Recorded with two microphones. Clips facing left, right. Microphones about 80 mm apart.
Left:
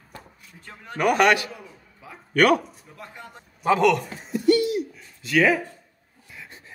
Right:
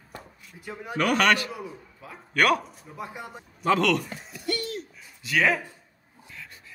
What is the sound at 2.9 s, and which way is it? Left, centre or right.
Speech, centre.